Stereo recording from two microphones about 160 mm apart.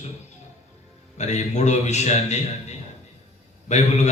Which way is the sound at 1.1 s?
45° left (ahead or behind).